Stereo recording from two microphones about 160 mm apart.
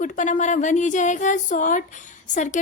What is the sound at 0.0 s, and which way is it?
A woman's voice, 50° left (ahead or behind).